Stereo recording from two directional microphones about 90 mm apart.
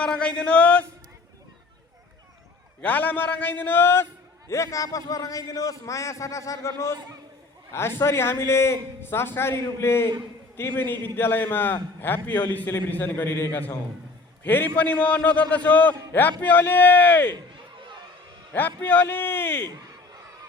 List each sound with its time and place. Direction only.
0.0 s a man's voice: 10° left (ahead or behind)
2.8 s a man's voice: 20° left (ahead or behind)
18.8 s a man's voice: 20° left (ahead or behind)